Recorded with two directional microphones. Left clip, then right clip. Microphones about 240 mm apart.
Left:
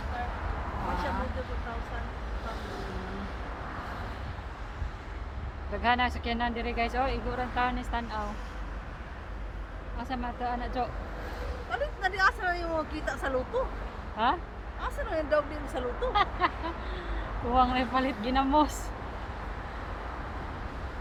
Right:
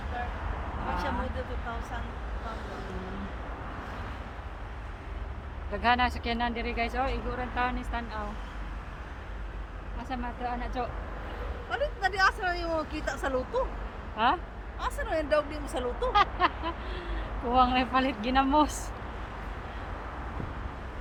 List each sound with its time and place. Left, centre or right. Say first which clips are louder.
5.7 s speech: right 1 dB; centre; by 8.3 s left
10.0 s speech: left 1 dB; left
11.7 s speech: right 2 dB; centre
14.8 s speech: right 2 dB; right
16.1 s a sound: right 3 dB; centre
17.5 s speech: right 1 dB; centre